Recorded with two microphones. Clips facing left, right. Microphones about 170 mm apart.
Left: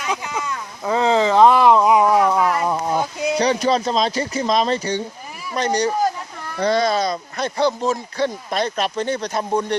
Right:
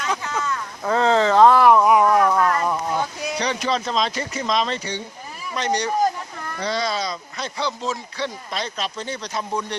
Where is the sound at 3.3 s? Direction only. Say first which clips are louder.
Left 6 dB; 35° left (ahead or behind).